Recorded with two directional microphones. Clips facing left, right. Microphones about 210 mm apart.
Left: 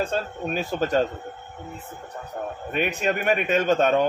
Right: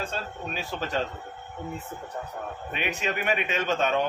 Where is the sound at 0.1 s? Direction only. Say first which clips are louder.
Left 7 dB; 50° left (ahead or behind).